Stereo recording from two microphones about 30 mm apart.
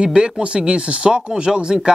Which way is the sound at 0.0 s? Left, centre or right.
Right.